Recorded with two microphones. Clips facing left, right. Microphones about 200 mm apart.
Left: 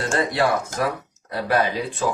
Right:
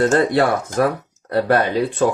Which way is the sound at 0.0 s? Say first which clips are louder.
Right 7 dB; 55° right (ahead or behind).